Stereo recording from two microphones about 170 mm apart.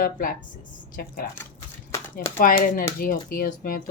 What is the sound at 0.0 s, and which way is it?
Speech, 55° left (ahead or behind).